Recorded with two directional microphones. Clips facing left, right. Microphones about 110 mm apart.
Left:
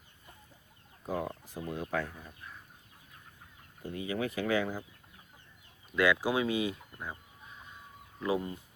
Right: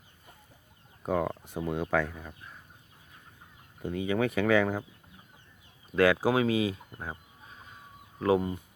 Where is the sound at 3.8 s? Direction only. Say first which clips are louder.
Right 6 dB; 90° right.